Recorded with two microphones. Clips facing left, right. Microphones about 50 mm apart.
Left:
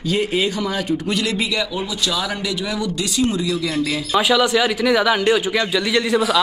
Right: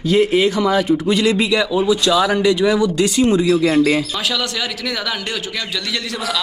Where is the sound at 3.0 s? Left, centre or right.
Right.